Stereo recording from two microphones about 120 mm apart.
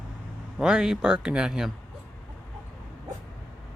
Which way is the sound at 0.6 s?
5° right (ahead or behind).